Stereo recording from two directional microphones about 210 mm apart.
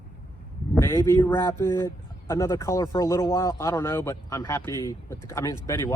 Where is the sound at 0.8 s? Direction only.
10° left (ahead or behind).